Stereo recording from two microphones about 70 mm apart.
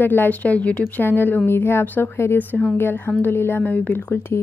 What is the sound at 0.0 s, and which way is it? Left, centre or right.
Speech, left.